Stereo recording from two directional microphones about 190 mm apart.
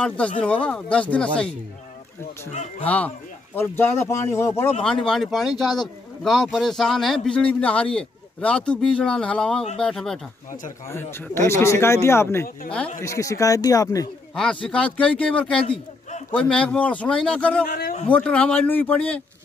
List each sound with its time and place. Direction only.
0.4 s speech: 5° left (ahead or behind)
2.8 s speech: 10° left (ahead or behind)
4.8 s speech: 5° left (ahead or behind); by 14.0 s 20° left (ahead or behind)
14.3 s speech: 5° left (ahead or behind)